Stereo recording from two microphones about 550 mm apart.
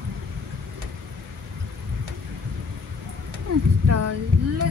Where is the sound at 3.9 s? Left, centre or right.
Right.